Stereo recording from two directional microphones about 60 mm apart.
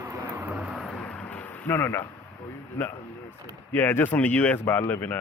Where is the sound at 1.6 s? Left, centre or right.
Left.